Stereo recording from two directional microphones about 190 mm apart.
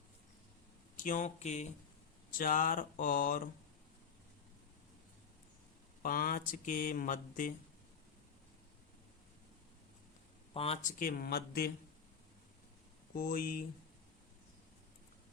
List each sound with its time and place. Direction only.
0.9 s speech: 45° left (ahead or behind)
6.0 s speech: 50° left (ahead or behind)
10.5 s speech: 30° left (ahead or behind)
10.8 s speech: 50° left (ahead or behind)
13.1 s speech: 50° left (ahead or behind)